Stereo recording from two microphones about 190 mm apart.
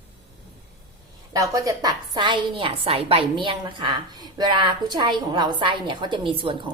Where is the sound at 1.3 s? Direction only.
15° right (ahead or behind).